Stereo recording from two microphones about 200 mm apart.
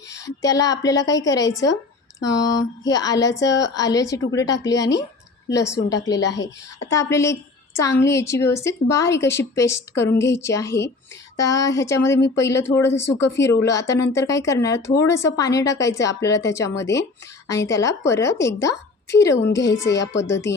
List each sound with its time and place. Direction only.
0.1 s a woman's voice: 15° left (ahead or behind)